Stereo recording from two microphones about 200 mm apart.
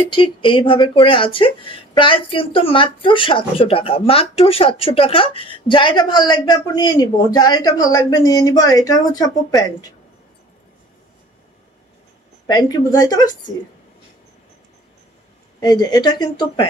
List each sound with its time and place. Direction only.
0.1 s speech: 25° left (ahead or behind)
12.4 s speech: 20° left (ahead or behind)
15.6 s speech: 20° left (ahead or behind)